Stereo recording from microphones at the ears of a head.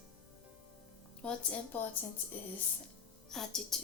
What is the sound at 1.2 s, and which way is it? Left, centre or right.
Speech, left.